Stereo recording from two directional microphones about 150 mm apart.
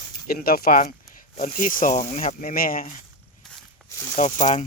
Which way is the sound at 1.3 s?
60° left (ahead or behind).